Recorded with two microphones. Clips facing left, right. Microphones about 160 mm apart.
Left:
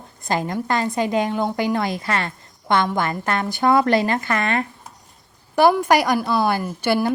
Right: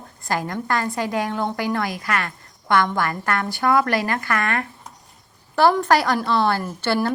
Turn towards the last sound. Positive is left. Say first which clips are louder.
# left 2 dB
turn(degrees=10)  # may be behind; listen again after turning